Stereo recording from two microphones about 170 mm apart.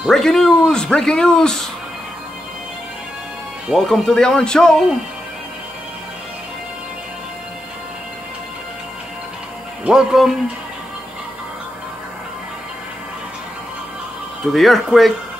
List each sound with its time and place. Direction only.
0.0 s a man's voice: centre (ahead or behind)
3.6 s a man's voice: centre (ahead or behind)
9.8 s a man's voice: 5° right (ahead or behind)
14.5 s a man's voice: centre (ahead or behind)